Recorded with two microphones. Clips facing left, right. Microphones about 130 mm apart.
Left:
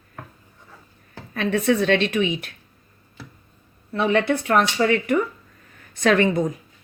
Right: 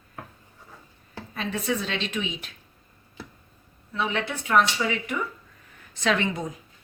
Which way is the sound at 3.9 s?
55° left (ahead or behind).